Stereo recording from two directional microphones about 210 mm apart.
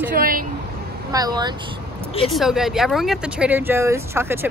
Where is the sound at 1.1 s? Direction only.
20° right (ahead or behind).